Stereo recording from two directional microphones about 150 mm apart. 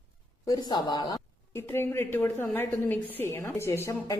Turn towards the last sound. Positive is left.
turn(degrees=20)  # may be behind; listen again after turning